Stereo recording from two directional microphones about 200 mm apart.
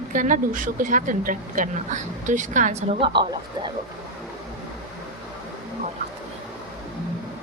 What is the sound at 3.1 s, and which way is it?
Speech, 25° right (ahead or behind).